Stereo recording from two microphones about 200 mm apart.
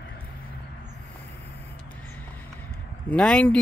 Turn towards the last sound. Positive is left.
turn(degrees=5)  # may be behind; listen again after turning